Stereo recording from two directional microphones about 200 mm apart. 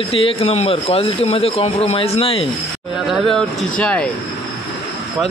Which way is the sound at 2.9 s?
Centre (ahead or behind).